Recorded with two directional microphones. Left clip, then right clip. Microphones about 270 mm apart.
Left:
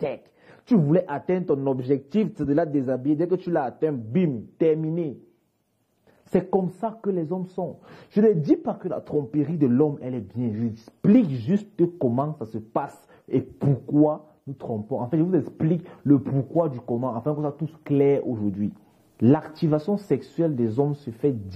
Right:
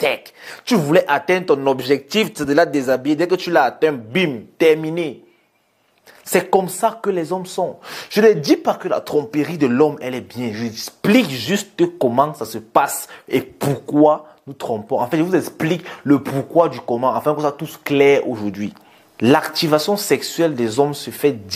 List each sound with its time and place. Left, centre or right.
0.0 s speech: centre
6.8 s speech: centre
7.2 s speech: right
7.8 s speech: centre
13.7 s speech: right
15.0 s speech: centre
19.7 s speech: centre
20.1 s speech: centre